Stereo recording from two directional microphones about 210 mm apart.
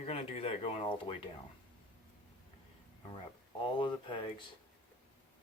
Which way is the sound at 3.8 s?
20° left (ahead or behind).